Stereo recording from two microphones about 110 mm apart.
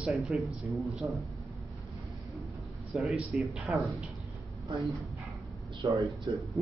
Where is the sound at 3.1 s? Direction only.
5° right (ahead or behind).